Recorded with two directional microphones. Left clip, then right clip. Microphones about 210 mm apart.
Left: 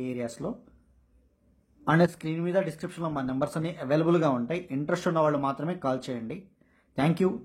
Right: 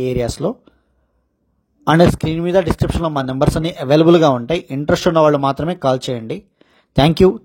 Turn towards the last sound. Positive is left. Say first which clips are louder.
# right 15 dB
turn(degrees=-40)  # may be behind; listen again after turning